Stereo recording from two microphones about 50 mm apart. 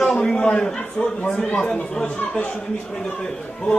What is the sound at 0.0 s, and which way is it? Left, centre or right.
A man's voice, centre.